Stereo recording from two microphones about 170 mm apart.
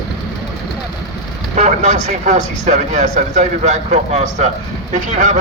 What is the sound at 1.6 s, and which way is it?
Speech, 45° right (ahead or behind).